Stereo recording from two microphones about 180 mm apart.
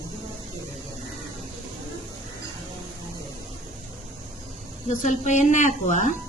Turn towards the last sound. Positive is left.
turn(degrees=45)  # may be behind; listen again after turning